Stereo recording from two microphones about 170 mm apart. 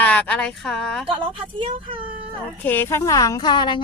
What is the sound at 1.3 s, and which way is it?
Speech, 30° right (ahead or behind).